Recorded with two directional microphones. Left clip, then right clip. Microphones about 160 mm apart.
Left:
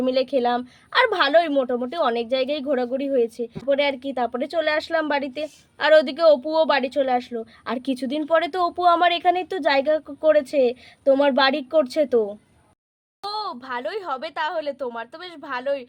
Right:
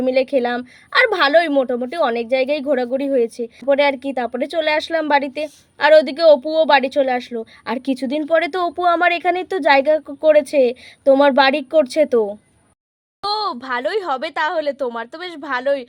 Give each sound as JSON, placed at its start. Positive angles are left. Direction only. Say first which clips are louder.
{"t": 0.0, "sound": "a woman's voice", "louder": "right 4 dB", "side_deg": -20}
{"t": 13.3, "sound": "speech", "louder": "right 7 dB", "side_deg": -40}